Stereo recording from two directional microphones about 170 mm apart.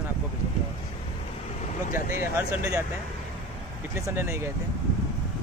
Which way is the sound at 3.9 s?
15° right (ahead or behind).